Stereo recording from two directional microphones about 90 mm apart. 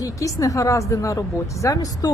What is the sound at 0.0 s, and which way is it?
A woman's voice, 40° left (ahead or behind).